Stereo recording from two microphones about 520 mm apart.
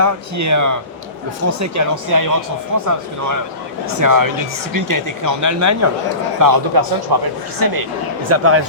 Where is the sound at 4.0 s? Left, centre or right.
Right.